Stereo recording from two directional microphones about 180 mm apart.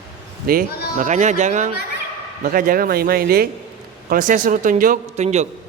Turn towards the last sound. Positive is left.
turn(degrees=-40)  # may be behind; listen again after turning